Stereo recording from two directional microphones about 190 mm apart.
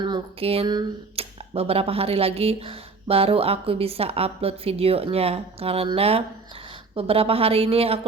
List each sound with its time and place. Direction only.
0.0 s speech: 25° right (ahead or behind)